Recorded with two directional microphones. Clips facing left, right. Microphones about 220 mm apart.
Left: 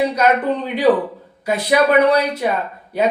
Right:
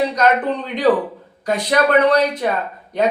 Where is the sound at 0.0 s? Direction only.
10° left (ahead or behind).